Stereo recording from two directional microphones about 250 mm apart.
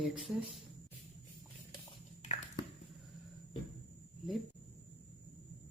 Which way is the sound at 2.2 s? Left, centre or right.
Left.